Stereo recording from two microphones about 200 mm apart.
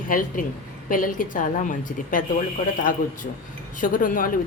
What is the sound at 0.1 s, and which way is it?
A woman's voice, 45° left (ahead or behind).